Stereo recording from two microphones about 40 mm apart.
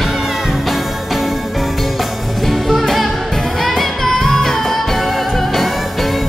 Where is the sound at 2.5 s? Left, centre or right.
Centre.